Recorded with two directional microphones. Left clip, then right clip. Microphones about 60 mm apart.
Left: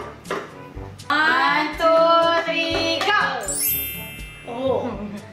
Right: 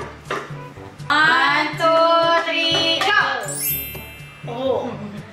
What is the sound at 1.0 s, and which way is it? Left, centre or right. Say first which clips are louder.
Music: right 3 dB; centre.